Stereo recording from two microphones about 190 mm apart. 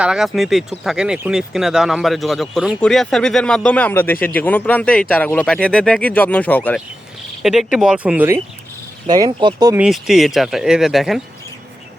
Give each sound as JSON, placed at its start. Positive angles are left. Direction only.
{"t": 0.0, "sound": "speech", "side_deg": -5}
{"t": 7.4, "sound": "speech", "side_deg": 0}
{"t": 9.0, "sound": "speech", "side_deg": -20}
{"t": 9.7, "sound": "speech", "side_deg": -5}